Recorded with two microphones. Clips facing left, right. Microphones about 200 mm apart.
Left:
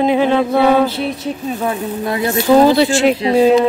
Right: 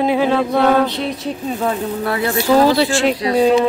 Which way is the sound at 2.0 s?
20° left (ahead or behind).